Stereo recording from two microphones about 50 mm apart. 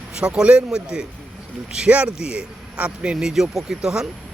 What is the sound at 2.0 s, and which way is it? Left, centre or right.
Speech, centre.